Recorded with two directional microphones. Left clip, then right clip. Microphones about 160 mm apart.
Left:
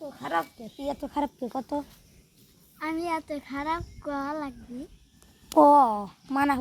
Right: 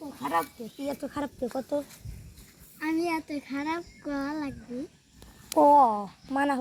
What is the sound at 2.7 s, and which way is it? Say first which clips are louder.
A child's voice: right 1 dB; 20° left (ahead or behind).